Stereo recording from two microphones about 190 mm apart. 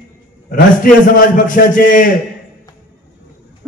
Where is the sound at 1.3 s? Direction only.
45° left (ahead or behind).